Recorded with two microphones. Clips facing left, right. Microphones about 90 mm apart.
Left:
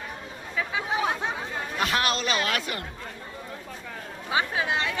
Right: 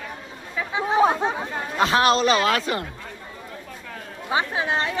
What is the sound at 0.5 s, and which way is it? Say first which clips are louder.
Chatter: right 7 dB; 30° right (ahead or behind).